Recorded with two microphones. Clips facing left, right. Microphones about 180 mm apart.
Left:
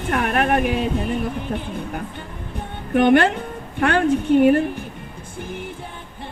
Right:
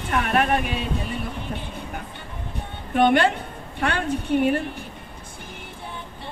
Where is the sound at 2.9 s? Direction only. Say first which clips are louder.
Left 3 dB; 50° left (ahead or behind).